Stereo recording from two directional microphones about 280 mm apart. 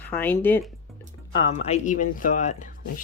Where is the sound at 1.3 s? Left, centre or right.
Centre.